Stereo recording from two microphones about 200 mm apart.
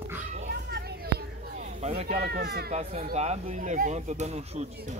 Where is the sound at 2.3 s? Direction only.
55° right (ahead or behind).